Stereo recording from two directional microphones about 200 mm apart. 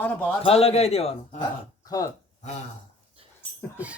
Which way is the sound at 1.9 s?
20° left (ahead or behind).